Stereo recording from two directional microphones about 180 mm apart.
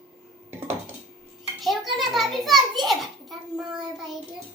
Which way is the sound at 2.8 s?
Centre (ahead or behind).